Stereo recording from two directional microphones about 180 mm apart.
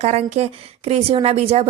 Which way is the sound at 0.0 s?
35° right (ahead or behind).